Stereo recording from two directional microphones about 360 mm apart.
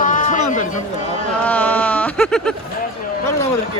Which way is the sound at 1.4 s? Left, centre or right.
Centre.